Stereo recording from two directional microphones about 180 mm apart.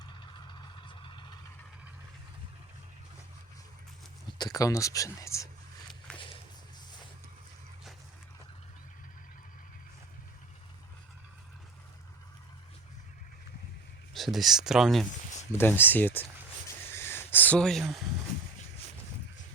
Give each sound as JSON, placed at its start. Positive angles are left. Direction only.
{"t": 0.0, "sound": "vehicle", "side_deg": 25}
{"t": 4.4, "sound": "speech", "side_deg": 20}
{"t": 14.1, "sound": "speech", "side_deg": 0}
{"t": 15.5, "sound": "speech", "side_deg": 10}
{"t": 16.6, "sound": "a sound", "side_deg": 15}